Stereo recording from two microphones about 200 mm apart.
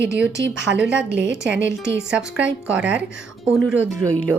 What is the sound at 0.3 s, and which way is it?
Speech, 60° right (ahead or behind).